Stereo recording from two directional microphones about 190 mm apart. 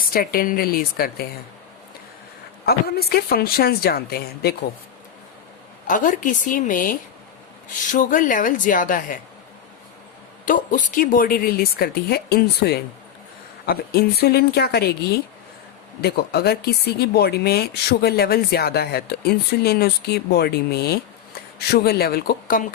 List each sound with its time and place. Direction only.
0.1 s a woman's voice: 50° left (ahead or behind)
2.6 s speech: 55° left (ahead or behind)
5.9 s a woman's voice: 45° left (ahead or behind)
10.4 s a woman's voice: 45° left (ahead or behind)
16.0 s speech: 55° left (ahead or behind)